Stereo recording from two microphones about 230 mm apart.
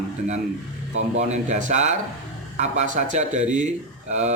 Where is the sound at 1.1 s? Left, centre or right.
Right.